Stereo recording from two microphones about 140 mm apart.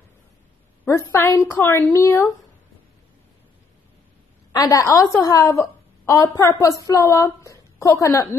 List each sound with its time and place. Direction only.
0.8 s a woman's voice: 20° left (ahead or behind)
4.5 s a woman's voice: 25° left (ahead or behind)